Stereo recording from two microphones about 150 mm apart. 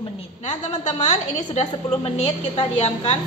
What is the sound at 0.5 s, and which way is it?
A woman's voice, 45° left (ahead or behind).